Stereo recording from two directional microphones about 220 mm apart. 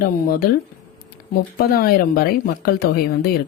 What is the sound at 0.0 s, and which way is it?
Speech, 45° left (ahead or behind).